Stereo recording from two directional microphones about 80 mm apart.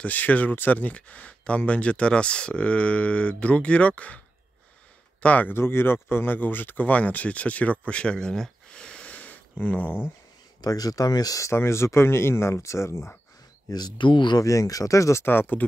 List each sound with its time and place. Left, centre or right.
0.0 s speech: centre
5.2 s speech: left
10.6 s speech: left
11.5 s speech: left
13.7 s speech: left
14.4 s speech: left
15.2 s speech: left